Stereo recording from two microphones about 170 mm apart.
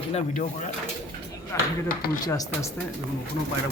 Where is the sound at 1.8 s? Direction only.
60° left (ahead or behind).